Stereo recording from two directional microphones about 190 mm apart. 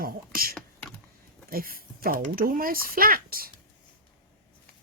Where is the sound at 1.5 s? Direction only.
50° right (ahead or behind).